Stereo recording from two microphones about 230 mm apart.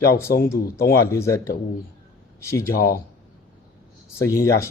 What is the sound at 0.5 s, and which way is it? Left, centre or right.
Speech, centre.